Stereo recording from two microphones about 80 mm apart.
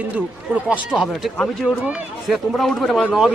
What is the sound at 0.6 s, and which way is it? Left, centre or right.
A man's voice, centre.